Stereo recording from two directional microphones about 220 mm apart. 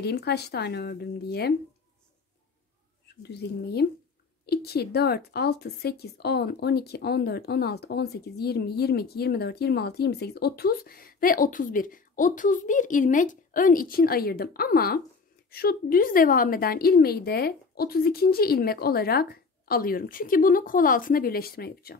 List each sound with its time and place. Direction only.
0.0 s speech: 50° left (ahead or behind)
3.2 s speech: 50° left (ahead or behind)